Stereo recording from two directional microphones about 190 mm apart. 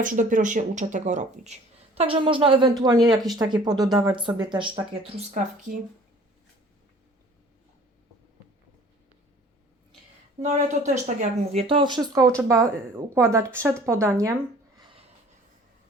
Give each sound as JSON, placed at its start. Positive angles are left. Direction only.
{"t": 0.0, "sound": "a woman's voice", "side_deg": -45}
{"t": 5.3, "sound": "speech", "side_deg": -40}
{"t": 10.4, "sound": "a woman's voice", "side_deg": -35}